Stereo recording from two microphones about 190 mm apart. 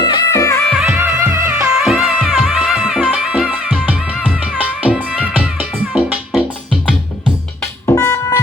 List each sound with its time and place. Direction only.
0.0 s music: 20° left (ahead or behind)
0.7 s music: 5° right (ahead or behind)
7.6 s music: 15° left (ahead or behind)